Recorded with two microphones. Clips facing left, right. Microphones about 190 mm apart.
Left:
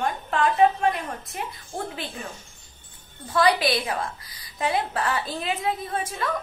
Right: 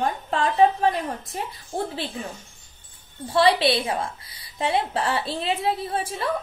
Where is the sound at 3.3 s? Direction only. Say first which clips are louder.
Right 2 dB; 30° right (ahead or behind).